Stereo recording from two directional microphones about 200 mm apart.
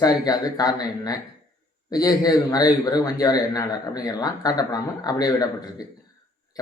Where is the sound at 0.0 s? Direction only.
20° left (ahead or behind).